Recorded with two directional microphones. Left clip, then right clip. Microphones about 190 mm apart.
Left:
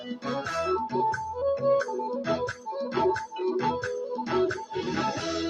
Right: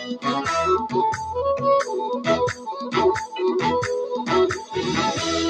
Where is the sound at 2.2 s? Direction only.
45° right (ahead or behind).